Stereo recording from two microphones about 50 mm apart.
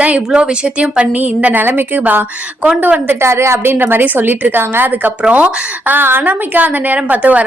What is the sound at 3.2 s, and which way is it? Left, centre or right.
Speech, right.